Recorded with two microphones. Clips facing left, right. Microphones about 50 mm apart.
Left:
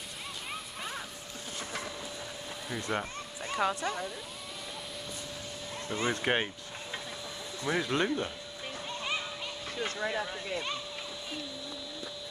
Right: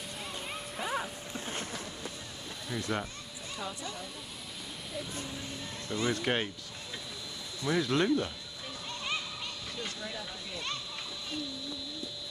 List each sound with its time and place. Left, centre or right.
0.7 s music: centre
2.9 s speech: centre
3.5 s speech: left
5.9 s speech: left
6.2 s speech: centre
7.6 s speech: left
9.8 s speech: left